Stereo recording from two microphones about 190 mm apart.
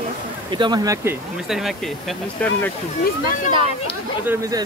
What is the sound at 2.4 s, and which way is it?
Speech, 10° left (ahead or behind).